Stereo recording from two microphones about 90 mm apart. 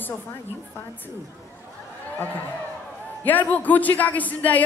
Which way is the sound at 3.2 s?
20° left (ahead or behind).